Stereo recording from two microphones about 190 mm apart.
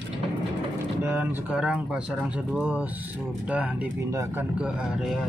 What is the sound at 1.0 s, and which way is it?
Speech, 10° right (ahead or behind).